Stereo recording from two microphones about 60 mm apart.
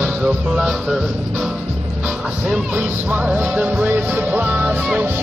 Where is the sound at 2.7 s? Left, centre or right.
Right.